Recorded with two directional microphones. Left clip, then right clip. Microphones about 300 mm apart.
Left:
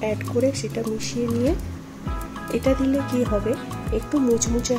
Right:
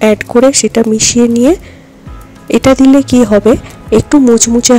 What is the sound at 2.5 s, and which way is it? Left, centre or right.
Speech, right.